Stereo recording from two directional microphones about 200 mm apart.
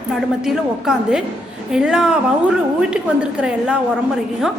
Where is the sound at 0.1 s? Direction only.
Centre (ahead or behind).